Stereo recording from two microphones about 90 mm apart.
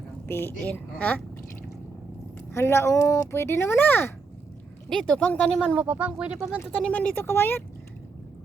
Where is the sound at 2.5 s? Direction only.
30° left (ahead or behind).